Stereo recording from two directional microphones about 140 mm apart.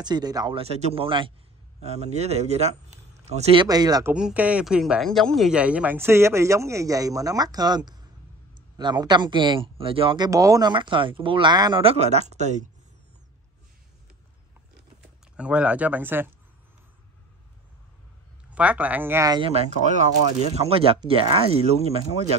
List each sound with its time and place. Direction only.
0.0 s speech: 30° right (ahead or behind)
0.6 s speech: 50° right (ahead or behind)
1.8 s speech: 50° right (ahead or behind)
3.6 s speech: 25° right (ahead or behind)
4.1 s speech: 10° right (ahead or behind); by 11.8 s 30° right (ahead or behind)
11.8 s speech: 45° right (ahead or behind)
15.3 s speech: 10° right (ahead or behind)
18.5 s speech: 10° right (ahead or behind)
19.2 s speech: 30° right (ahead or behind)
19.5 s speech: 60° right (ahead or behind)
20.5 s speech: 45° right (ahead or behind)